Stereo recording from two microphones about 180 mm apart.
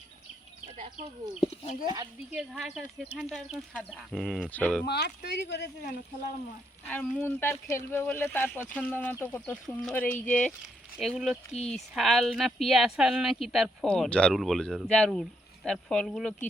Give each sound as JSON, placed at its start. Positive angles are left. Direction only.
{"t": 1.4, "sound": "speech", "side_deg": 35}
{"t": 1.8, "sound": "speech", "side_deg": -25}
{"t": 2.3, "sound": "speech", "side_deg": 0}
{"t": 4.9, "sound": "speech", "side_deg": 65}
{"t": 6.8, "sound": "speech", "side_deg": 10}